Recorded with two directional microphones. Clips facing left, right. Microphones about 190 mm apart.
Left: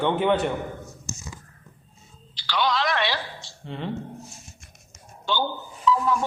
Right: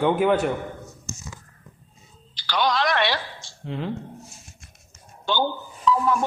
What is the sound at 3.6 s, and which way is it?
Speech, centre (ahead or behind).